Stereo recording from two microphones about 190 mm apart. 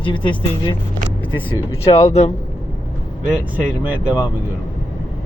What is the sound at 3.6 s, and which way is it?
Speech, 5° right (ahead or behind).